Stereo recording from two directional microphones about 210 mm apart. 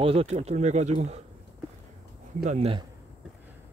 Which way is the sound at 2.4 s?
30° right (ahead or behind).